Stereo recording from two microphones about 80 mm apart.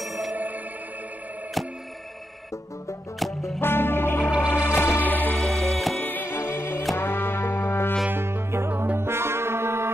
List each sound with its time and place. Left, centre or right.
0.0 s music: centre
0.3 s music: right
3.2 s music: centre
3.6 s music: left
5.4 s music: centre
5.9 s music: left
8.1 s music: right